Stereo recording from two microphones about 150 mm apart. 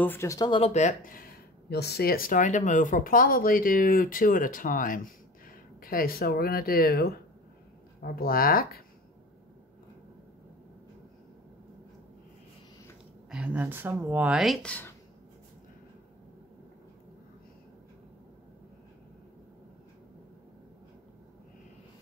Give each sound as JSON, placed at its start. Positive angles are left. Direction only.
{"t": 0.0, "sound": "speech", "side_deg": 15}
{"t": 0.5, "sound": "speech", "side_deg": 45}
{"t": 8.0, "sound": "speech", "side_deg": 80}
{"t": 13.3, "sound": "speech", "side_deg": -10}